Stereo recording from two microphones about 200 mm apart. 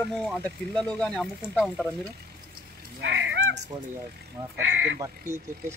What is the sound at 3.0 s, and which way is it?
Cat, 60° right (ahead or behind).